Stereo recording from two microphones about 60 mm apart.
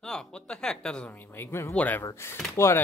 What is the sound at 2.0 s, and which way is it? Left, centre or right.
Speech, left.